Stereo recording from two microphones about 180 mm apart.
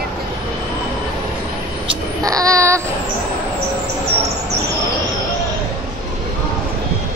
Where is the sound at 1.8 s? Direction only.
20° right (ahead or behind).